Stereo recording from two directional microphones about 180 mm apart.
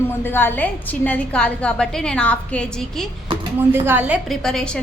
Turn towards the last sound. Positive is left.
turn(degrees=0)  # may be behind; listen again after turning